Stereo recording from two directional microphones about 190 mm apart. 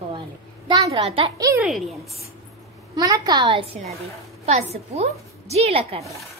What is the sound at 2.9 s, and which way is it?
A woman's voice, 20° right (ahead or behind).